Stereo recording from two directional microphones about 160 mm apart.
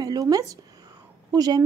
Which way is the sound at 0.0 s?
25° right (ahead or behind).